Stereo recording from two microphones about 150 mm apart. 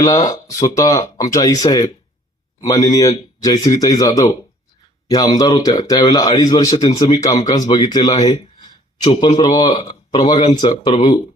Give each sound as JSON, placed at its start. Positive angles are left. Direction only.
{"t": 0.0, "sound": "speech", "side_deg": 25}
{"t": 8.6, "sound": "a sound", "side_deg": 30}
{"t": 9.4, "sound": "speech", "side_deg": 30}